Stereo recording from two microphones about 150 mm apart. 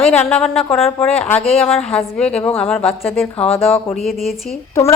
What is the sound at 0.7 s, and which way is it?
Speech, 40° left (ahead or behind).